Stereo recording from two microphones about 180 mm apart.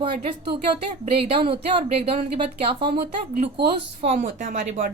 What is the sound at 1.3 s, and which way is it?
Speech, 30° right (ahead or behind).